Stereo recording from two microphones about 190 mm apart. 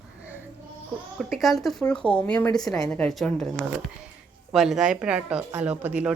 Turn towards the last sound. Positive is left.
turn(degrees=-10)  # may be behind; listen again after turning